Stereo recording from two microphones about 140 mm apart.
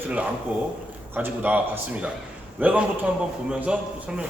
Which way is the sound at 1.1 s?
15° right (ahead or behind).